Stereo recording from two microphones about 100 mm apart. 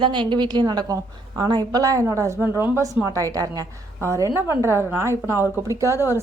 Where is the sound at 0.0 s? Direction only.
50° right (ahead or behind).